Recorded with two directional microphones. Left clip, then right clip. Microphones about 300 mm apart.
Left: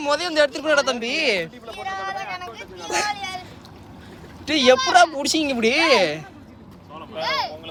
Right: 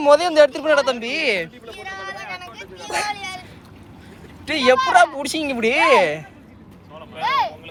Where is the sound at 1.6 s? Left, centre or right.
Left.